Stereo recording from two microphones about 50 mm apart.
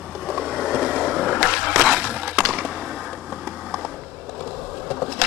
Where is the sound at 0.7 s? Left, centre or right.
Centre.